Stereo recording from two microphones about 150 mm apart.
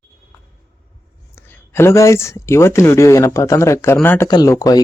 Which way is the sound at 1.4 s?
15° left (ahead or behind).